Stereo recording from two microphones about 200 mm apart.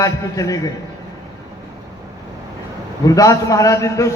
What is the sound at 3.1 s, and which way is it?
A man's voice, 15° left (ahead or behind).